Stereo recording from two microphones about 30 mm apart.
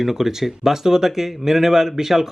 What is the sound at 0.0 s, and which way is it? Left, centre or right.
A man's voice, centre.